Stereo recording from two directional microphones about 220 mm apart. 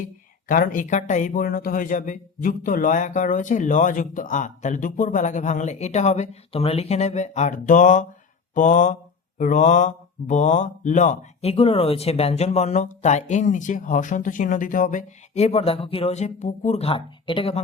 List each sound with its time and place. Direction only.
0.4 s speech: 40° left (ahead or behind)